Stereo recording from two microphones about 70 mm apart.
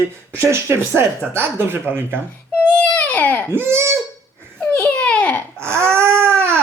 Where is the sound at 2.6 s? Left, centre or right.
Centre.